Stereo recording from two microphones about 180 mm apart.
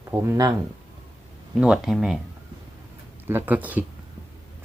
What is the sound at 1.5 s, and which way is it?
Speech, 5° right (ahead or behind).